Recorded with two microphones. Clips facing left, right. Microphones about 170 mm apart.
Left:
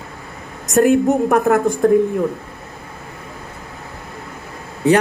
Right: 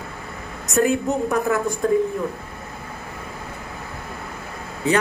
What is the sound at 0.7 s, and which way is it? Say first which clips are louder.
A woman's voice: left 6 dB; 55° left (ahead or behind).